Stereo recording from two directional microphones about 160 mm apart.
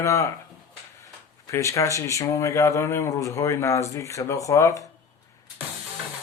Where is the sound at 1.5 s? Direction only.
20° left (ahead or behind).